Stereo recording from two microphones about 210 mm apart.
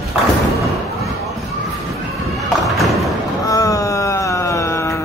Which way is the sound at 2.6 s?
Centre (ahead or behind).